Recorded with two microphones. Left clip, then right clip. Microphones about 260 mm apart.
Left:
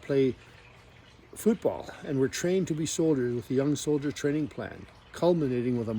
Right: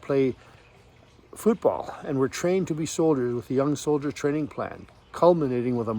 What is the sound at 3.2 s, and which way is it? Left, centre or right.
Speech, right.